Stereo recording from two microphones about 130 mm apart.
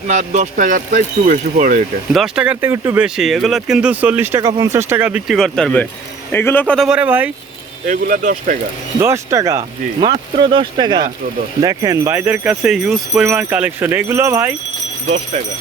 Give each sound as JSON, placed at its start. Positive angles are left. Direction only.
{"t": 0.1, "sound": "speech", "side_deg": -70}
{"t": 2.1, "sound": "speech", "side_deg": -5}
{"t": 3.0, "sound": "speech", "side_deg": 0}
{"t": 5.3, "sound": "a man's voice", "side_deg": 0}
{"t": 6.7, "sound": "speech", "side_deg": -5}
{"t": 7.9, "sound": "speech", "side_deg": -90}
{"t": 9.0, "sound": "speech", "side_deg": -20}
{"t": 10.0, "sound": "speech", "side_deg": -40}